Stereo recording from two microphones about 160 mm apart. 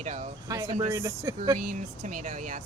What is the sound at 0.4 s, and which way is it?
Speech, 20° right (ahead or behind).